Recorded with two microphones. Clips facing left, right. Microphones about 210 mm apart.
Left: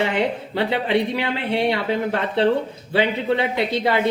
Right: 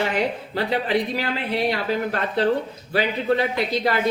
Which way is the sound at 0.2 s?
25° left (ahead or behind).